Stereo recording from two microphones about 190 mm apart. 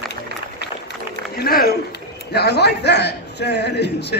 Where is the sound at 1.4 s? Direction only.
50° left (ahead or behind).